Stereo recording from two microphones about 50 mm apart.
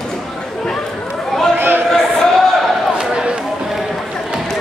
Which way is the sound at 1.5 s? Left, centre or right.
Right.